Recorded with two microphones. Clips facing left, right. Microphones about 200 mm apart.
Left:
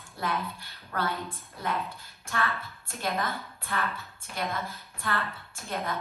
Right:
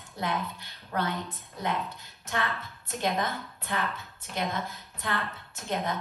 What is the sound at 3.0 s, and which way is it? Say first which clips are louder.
Speech: right 2 dB; 15° right (ahead or behind).